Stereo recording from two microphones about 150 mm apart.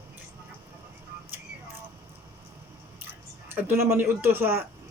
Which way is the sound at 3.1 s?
15° right (ahead or behind).